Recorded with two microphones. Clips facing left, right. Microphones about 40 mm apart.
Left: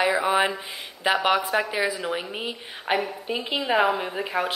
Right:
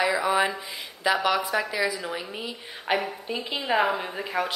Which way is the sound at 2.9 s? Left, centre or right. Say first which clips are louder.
Left 1 dB; centre.